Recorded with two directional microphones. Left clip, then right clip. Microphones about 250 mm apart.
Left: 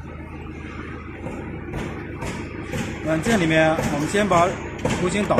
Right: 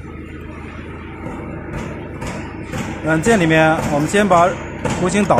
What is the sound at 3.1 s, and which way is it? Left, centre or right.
Speech, right.